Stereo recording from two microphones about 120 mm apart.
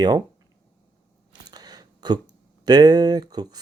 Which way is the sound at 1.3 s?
35° right (ahead or behind).